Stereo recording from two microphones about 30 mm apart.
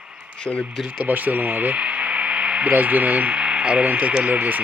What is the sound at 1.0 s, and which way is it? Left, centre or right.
Speech, right.